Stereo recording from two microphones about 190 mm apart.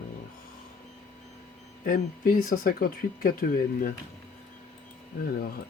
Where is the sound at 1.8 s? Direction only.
45° left (ahead or behind).